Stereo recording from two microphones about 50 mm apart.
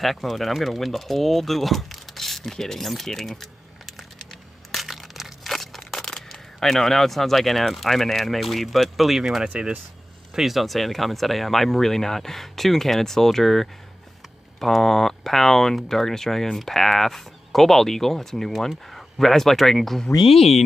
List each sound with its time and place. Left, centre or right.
0.0 s speech: centre
4.7 s crushing: centre
6.0 s speech: centre
9.5 s speech: right
10.3 s speech: centre